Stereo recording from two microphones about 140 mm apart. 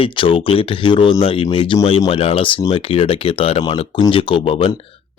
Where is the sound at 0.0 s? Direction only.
40° left (ahead or behind).